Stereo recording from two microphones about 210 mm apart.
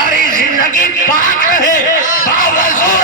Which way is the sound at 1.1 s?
40° left (ahead or behind).